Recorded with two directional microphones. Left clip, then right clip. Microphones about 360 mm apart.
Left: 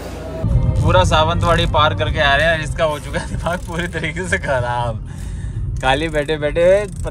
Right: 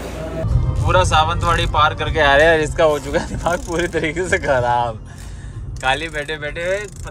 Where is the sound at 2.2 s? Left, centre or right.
Centre.